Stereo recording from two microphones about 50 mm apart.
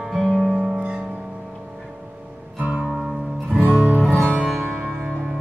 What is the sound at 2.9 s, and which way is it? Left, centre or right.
Music, centre.